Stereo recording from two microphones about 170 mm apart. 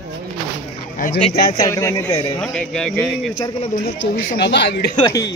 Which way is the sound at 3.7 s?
60° left (ahead or behind).